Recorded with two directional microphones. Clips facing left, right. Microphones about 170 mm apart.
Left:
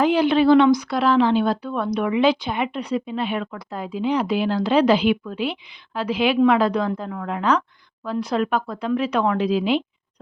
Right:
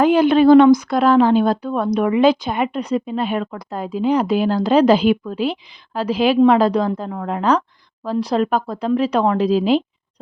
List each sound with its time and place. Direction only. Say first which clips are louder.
0.0 s a woman's voice: right 4 dB; 50° right (ahead or behind)